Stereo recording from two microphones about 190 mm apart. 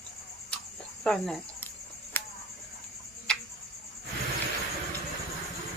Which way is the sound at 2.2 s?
10° left (ahead or behind).